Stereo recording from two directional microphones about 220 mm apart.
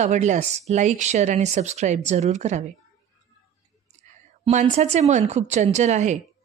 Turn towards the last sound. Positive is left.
turn(degrees=-30)  # may be behind; listen again after turning